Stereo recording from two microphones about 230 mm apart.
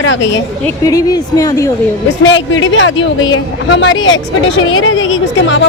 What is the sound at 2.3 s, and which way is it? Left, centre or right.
A woman's voice, left.